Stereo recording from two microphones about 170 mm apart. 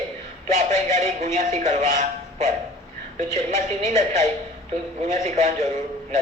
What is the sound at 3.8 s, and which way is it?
Speech, 45° right (ahead or behind).